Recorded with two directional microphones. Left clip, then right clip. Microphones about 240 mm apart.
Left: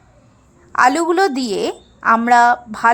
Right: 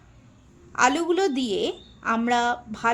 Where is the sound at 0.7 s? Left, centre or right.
Centre.